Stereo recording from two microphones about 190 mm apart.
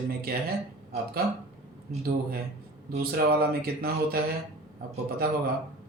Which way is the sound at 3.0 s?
55° right (ahead or behind).